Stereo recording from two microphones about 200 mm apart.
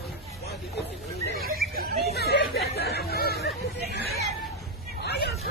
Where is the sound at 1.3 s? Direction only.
50° right (ahead or behind).